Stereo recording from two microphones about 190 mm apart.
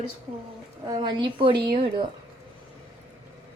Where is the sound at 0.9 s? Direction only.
25° right (ahead or behind).